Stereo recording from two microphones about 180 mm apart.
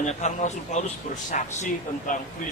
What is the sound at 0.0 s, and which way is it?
Speech, 40° left (ahead or behind).